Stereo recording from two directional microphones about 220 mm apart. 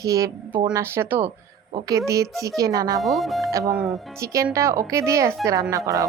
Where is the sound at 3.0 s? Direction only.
Centre (ahead or behind).